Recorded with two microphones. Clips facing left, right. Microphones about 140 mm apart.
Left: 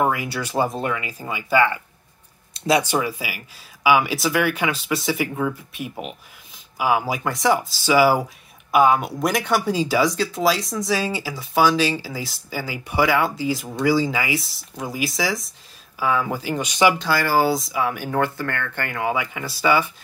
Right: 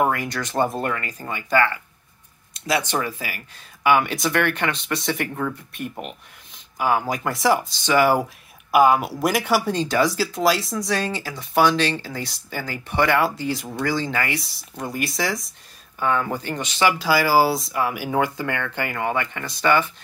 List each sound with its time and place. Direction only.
0.1 s speech: 10° left (ahead or behind)
2.5 s a sound: 30° left (ahead or behind)
2.8 s speech: 10° left (ahead or behind)
17.0 s speech: 10° right (ahead or behind)
18.9 s speech: 5° left (ahead or behind)